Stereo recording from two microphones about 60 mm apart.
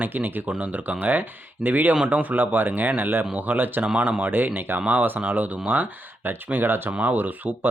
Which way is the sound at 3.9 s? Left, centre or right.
Right.